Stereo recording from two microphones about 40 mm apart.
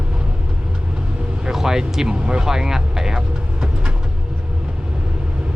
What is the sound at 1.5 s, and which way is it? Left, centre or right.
Speech, centre.